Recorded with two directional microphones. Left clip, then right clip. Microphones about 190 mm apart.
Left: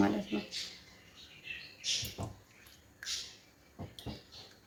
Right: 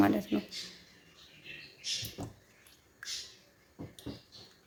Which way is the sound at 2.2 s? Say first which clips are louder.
Even; centre (ahead or behind).